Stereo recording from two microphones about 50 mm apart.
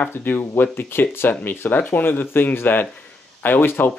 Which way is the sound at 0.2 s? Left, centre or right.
Left.